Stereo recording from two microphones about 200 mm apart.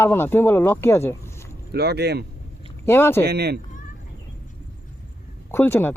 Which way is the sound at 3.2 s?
55° right (ahead or behind).